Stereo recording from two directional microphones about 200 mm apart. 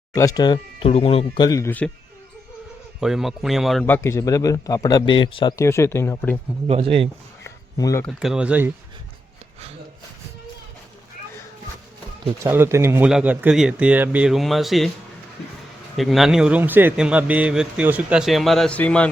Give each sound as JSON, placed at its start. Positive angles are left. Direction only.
{"t": 0.1, "sound": "speech", "side_deg": 15}
{"t": 3.0, "sound": "a man's voice", "side_deg": 0}
{"t": 6.7, "sound": "speech", "side_deg": -30}
{"t": 7.4, "sound": "a sound", "side_deg": 15}
{"t": 8.0, "sound": "a man's voice", "side_deg": 0}
{"t": 12.4, "sound": "speech", "side_deg": -10}
{"t": 16.0, "sound": "a man's voice", "side_deg": 0}